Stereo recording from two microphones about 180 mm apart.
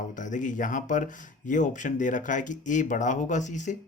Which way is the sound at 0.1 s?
45° left (ahead or behind).